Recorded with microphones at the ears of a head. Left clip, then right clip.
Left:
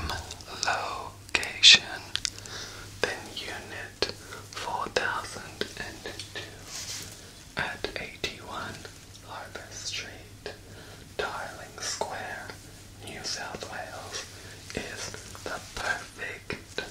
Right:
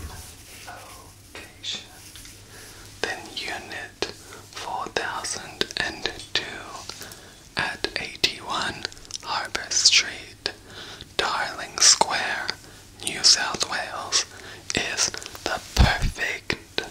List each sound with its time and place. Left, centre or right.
0.0 s whispering: left
4.0 s whispering: centre
5.2 s whispering: right